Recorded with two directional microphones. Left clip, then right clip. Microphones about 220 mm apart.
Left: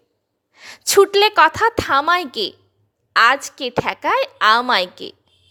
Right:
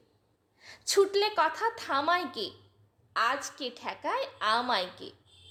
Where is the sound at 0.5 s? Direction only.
45° left (ahead or behind).